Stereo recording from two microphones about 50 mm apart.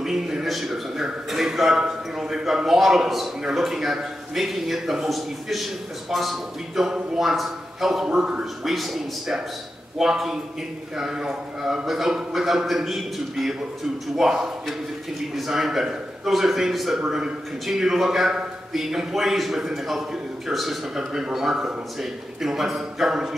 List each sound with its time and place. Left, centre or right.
0.0 s a man's voice: centre
8.1 s a man's voice: centre
8.6 s a man's voice: centre